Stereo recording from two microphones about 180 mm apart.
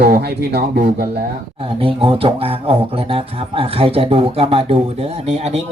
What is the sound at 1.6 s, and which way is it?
Speech, 30° right (ahead or behind).